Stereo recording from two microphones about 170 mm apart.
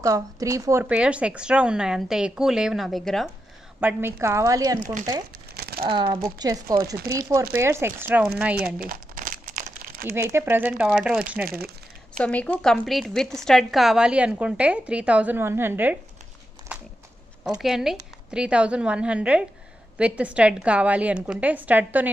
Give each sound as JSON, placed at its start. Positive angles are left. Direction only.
{"t": 0.0, "sound": "a woman's voice", "side_deg": -20}
{"t": 3.8, "sound": "a woman's voice", "side_deg": -15}
{"t": 5.6, "sound": "crumpling", "side_deg": -65}
{"t": 5.9, "sound": "a woman's voice", "side_deg": -25}
{"t": 8.7, "sound": "crumpling", "side_deg": -55}
{"t": 10.0, "sound": "a woman's voice", "side_deg": -15}
{"t": 12.2, "sound": "a woman's voice", "side_deg": 10}
{"t": 16.7, "sound": "a sound", "side_deg": -5}
{"t": 17.5, "sound": "a woman's voice", "side_deg": 0}